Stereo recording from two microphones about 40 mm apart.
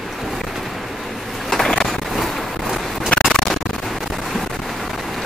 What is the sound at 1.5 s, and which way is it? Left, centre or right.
Vehicle, centre.